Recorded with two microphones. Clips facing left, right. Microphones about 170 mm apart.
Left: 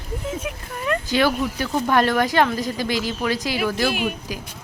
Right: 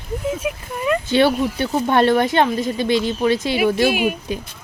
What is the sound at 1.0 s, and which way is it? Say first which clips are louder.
Speech: right 4 dB; 25° right (ahead or behind).